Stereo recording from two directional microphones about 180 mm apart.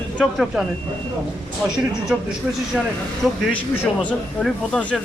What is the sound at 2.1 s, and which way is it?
A man's voice, 5° right (ahead or behind).